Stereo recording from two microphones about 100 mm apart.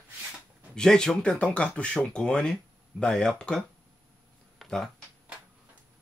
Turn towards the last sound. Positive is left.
turn(degrees=5)  # may be behind; listen again after turning